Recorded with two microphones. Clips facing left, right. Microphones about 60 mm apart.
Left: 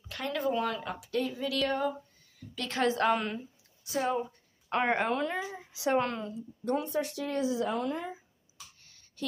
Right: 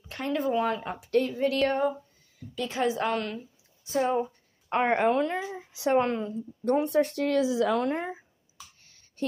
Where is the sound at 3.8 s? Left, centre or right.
Right.